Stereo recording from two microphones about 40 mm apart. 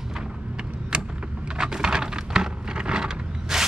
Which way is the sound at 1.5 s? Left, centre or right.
Centre.